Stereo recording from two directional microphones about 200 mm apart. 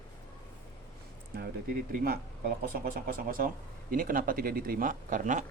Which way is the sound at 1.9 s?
50° right (ahead or behind).